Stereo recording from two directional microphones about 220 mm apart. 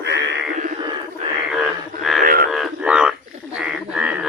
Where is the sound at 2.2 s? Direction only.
40° right (ahead or behind).